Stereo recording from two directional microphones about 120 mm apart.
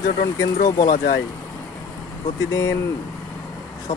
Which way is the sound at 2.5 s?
30° left (ahead or behind).